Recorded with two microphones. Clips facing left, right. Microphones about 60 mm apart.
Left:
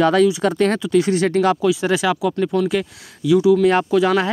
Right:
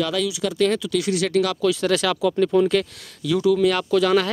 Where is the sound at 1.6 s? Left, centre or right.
Centre.